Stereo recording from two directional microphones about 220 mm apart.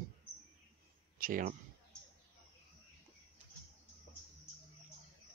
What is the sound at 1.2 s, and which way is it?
Speech, 40° right (ahead or behind).